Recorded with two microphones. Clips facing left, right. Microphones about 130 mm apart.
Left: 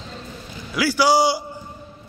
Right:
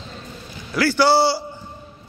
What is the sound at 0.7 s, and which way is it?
Speech, 10° left (ahead or behind).